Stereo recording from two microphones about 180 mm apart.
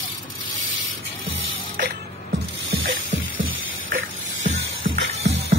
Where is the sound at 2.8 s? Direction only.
90° right.